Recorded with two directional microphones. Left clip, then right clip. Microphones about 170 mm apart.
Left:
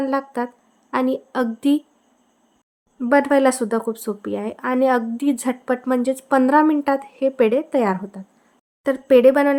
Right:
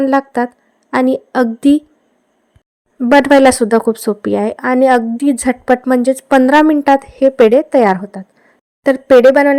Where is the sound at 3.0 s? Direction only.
40° right (ahead or behind).